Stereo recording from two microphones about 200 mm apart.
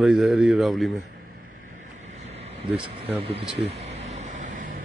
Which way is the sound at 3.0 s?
30° right (ahead or behind).